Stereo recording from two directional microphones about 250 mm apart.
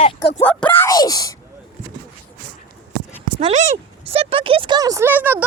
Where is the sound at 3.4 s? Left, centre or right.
Right.